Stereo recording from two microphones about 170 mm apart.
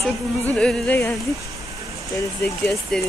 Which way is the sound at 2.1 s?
15° left (ahead or behind).